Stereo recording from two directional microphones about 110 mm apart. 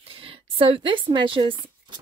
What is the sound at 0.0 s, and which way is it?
Speech, 60° right (ahead or behind).